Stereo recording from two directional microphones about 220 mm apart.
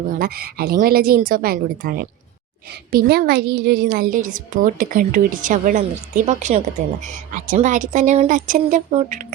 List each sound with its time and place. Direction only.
0.2 s a woman's voice: 40° right (ahead or behind)